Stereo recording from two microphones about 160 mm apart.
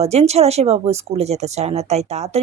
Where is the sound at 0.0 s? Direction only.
40° right (ahead or behind).